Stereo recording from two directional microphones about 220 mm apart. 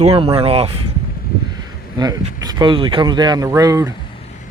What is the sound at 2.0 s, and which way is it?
Speech, 15° right (ahead or behind).